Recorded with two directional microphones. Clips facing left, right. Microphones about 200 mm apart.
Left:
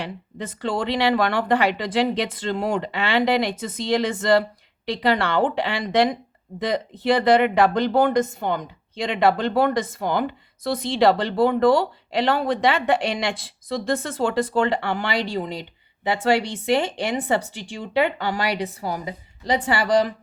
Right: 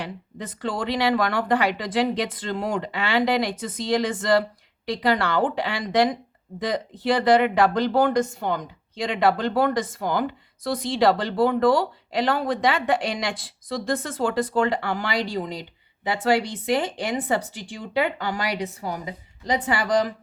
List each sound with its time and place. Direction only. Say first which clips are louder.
0.0 s speech: left 2 dB; 25° left (ahead or behind)
17.5 s a woman's voice: left 1 dB; 70° left (ahead or behind)
17.7 s a woman's voice: left 3 dB; 25° left (ahead or behind)